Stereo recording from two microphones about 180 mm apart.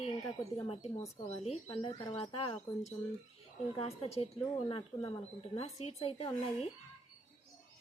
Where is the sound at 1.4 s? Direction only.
35° left (ahead or behind).